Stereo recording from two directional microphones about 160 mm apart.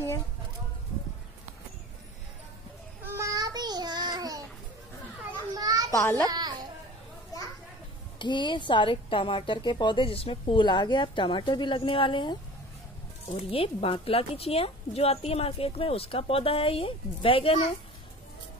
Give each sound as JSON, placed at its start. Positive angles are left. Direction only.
{"t": 3.0, "sound": "child singing", "side_deg": -20}
{"t": 5.5, "sound": "children playing", "side_deg": -25}
{"t": 5.9, "sound": "a child's voice", "side_deg": 15}
{"t": 6.2, "sound": "a sound", "side_deg": -25}
{"t": 8.2, "sound": "speech", "side_deg": 30}